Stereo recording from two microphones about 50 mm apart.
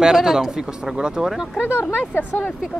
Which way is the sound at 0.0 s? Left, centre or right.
Centre.